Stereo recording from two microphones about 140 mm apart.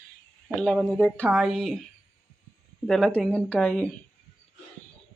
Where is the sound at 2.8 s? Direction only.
5° left (ahead or behind).